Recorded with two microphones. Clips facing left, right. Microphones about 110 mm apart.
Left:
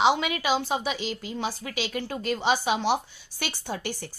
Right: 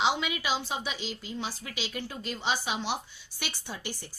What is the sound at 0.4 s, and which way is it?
A woman's voice, 55° left (ahead or behind).